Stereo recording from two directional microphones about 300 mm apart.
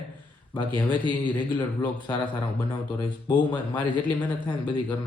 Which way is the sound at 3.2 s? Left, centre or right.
Centre.